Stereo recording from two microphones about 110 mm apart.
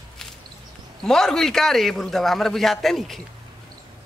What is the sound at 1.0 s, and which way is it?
Speech, 5° left (ahead or behind).